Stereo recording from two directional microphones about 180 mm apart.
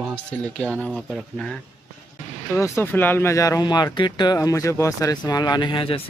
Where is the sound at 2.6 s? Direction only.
15° left (ahead or behind).